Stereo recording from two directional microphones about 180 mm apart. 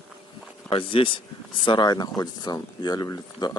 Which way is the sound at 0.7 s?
30° left (ahead or behind).